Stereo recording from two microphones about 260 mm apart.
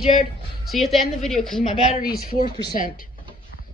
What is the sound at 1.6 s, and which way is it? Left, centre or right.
Speech, left.